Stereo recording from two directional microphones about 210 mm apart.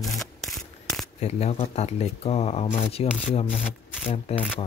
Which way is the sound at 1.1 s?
30° left (ahead or behind).